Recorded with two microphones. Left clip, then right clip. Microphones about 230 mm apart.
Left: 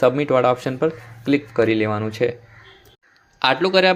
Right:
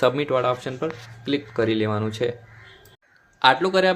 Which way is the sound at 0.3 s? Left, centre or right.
Left.